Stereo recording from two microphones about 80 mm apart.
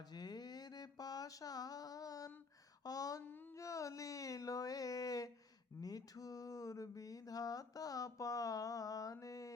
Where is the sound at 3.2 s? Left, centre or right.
Left.